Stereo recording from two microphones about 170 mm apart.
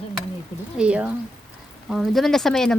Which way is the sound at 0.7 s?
5° right (ahead or behind).